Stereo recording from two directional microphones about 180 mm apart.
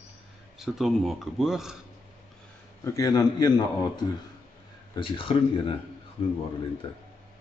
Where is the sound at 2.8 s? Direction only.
20° left (ahead or behind).